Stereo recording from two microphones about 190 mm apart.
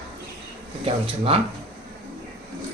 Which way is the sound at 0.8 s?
30° right (ahead or behind).